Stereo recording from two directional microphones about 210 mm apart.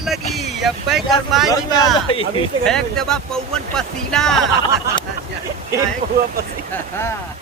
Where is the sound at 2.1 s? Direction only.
25° left (ahead or behind).